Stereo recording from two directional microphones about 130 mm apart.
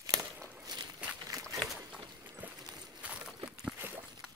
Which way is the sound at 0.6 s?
30° right (ahead or behind).